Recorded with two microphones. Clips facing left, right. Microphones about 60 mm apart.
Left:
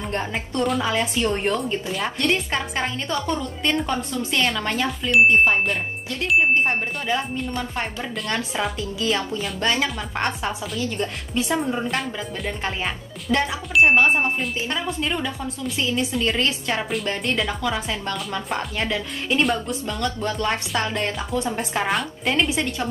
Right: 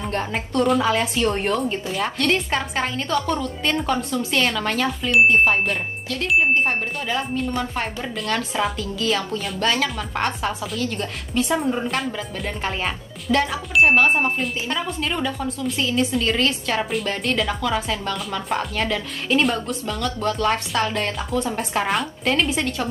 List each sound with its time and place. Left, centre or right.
0.1 s speech: centre
8.7 s a woman's voice: centre
16.3 s a woman's voice: centre
16.9 s speech: centre
18.8 s a woman's voice: centre
19.4 s a woman's voice: centre